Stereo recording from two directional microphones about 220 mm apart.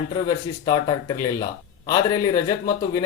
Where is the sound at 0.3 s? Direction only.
20° left (ahead or behind).